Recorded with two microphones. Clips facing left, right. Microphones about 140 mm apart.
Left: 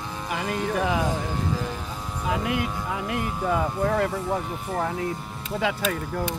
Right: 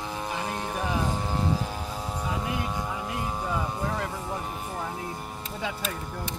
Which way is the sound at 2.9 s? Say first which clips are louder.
Left 4 dB; 70° left (ahead or behind).